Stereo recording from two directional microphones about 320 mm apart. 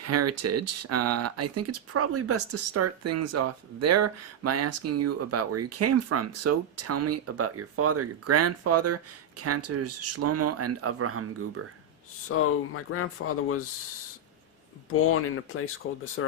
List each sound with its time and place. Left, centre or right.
0.0 s speech: right
12.3 s speech: left
15.1 s speech: left